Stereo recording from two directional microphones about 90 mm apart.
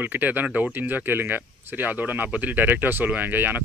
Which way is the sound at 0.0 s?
20° right (ahead or behind).